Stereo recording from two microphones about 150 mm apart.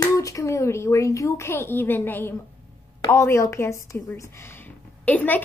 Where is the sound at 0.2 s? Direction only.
20° left (ahead or behind).